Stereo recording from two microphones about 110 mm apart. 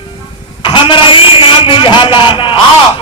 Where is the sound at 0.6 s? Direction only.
50° left (ahead or behind).